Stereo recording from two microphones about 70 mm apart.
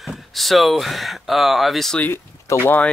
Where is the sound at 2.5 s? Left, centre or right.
Left.